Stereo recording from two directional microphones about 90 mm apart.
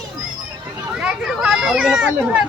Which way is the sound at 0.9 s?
5° right (ahead or behind).